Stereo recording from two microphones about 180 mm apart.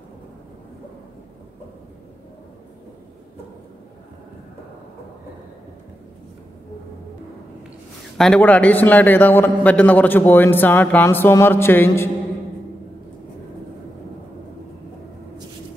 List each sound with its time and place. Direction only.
8.2 s a man's voice: 5° left (ahead or behind)